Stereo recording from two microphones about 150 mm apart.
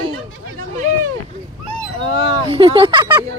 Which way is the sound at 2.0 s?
35° right (ahead or behind).